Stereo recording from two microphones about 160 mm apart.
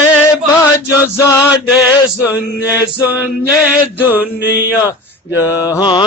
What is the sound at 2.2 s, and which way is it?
Mantra, 10° right (ahead or behind).